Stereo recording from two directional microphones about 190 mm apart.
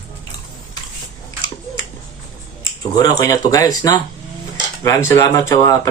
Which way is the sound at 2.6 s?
20° left (ahead or behind).